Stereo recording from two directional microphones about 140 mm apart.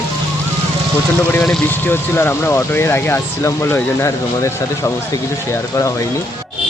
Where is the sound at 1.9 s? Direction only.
15° left (ahead or behind).